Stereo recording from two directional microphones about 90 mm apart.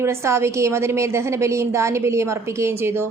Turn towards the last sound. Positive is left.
turn(degrees=-30)  # may be behind; listen again after turning